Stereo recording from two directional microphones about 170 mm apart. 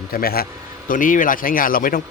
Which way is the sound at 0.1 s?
60° left (ahead or behind).